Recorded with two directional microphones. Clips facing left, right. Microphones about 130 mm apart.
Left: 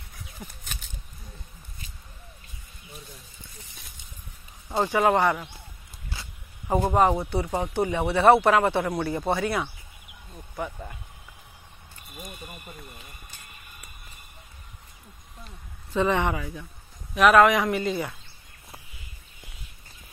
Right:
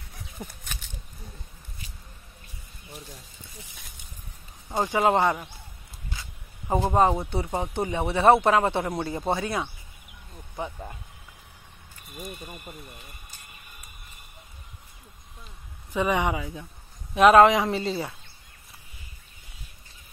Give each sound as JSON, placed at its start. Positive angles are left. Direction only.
{"t": 4.6, "sound": "speech", "side_deg": -15}
{"t": 6.7, "sound": "speech", "side_deg": -20}
{"t": 15.9, "sound": "speech", "side_deg": -15}
{"t": 17.1, "sound": "speech", "side_deg": -30}